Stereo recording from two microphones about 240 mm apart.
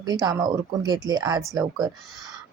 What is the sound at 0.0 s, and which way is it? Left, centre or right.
Speech, centre.